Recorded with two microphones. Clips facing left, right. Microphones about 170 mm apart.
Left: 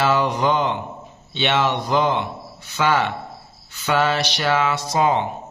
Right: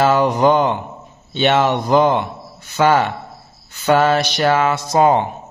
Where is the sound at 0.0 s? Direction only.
45° right (ahead or behind).